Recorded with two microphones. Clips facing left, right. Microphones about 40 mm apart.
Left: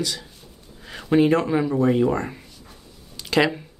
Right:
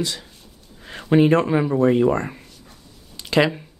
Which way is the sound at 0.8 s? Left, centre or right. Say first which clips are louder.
Right 2 dB; centre.